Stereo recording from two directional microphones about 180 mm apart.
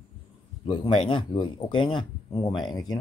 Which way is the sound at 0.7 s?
30° left (ahead or behind).